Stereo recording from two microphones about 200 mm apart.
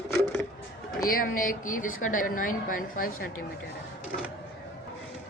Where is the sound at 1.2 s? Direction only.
40° left (ahead or behind).